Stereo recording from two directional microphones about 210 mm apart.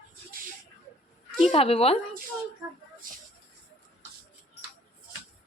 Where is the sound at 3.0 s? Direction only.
40° right (ahead or behind).